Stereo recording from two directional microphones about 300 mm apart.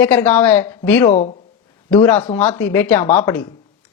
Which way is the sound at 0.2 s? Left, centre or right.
Centre.